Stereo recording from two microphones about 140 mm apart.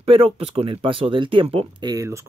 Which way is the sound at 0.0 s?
40° right (ahead or behind).